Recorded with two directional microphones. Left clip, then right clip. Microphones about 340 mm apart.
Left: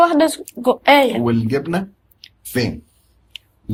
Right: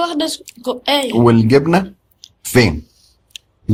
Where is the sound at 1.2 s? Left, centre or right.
Right.